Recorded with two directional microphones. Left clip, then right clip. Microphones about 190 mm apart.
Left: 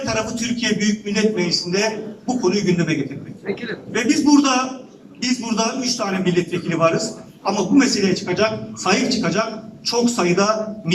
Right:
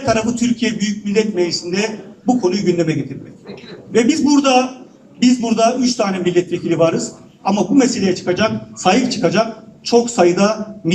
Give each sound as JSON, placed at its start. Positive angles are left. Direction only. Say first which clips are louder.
{"t": 0.0, "sound": "a man's voice", "louder": "right 6 dB", "side_deg": -40}
{"t": 3.9, "sound": "a man's voice", "louder": "right 2 dB", "side_deg": -40}